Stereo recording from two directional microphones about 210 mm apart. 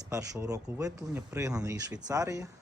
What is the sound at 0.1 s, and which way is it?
Speech, 15° right (ahead or behind).